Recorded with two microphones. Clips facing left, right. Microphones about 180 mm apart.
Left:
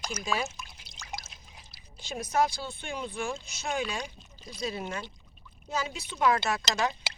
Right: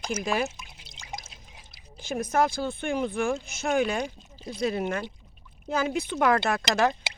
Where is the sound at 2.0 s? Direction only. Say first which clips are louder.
Right 3 dB; 55° right (ahead or behind).